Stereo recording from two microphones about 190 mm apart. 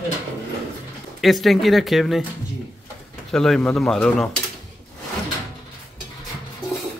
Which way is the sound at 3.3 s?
5° left (ahead or behind).